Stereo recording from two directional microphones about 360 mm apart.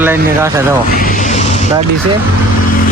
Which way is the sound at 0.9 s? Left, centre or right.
Left.